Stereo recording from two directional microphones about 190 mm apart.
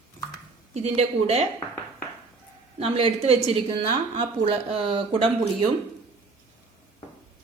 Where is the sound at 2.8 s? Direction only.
30° right (ahead or behind).